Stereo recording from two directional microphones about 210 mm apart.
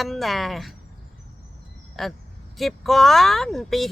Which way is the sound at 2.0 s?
Centre (ahead or behind).